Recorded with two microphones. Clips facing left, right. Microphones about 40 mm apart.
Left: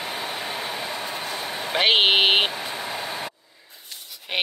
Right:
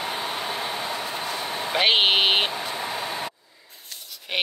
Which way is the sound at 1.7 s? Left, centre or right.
Centre.